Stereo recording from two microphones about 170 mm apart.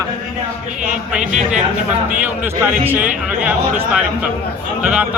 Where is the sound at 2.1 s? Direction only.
10° right (ahead or behind).